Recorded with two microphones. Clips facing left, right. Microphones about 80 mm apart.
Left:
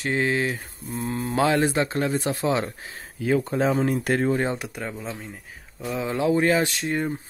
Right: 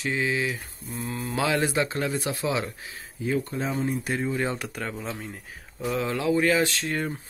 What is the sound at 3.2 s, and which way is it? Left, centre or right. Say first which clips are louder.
Speech: left 5 dB; left.